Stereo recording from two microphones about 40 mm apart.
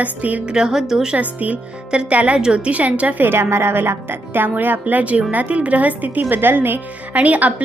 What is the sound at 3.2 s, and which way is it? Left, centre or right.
A woman's voice, right.